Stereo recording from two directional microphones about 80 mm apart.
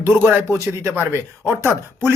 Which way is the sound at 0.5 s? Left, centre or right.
Right.